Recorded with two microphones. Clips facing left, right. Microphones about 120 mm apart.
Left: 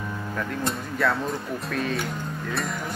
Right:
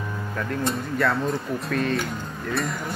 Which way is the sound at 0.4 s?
Centre (ahead or behind).